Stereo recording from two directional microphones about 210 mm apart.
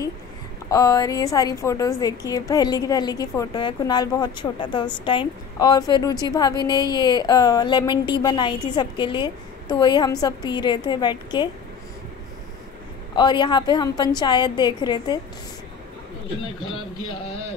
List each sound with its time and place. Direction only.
0.7 s a woman's voice: 15° left (ahead or behind)
13.1 s a woman's voice: 20° left (ahead or behind)